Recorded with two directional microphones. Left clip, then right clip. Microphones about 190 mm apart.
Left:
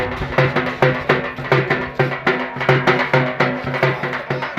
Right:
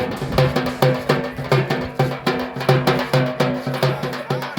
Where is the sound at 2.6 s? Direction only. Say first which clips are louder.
Left 3 dB; 55° right (ahead or behind).